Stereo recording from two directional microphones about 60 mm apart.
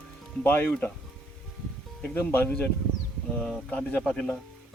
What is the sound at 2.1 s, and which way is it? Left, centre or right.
Speech, left.